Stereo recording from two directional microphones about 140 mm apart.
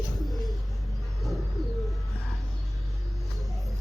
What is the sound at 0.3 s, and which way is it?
Pigeon, centre (ahead or behind).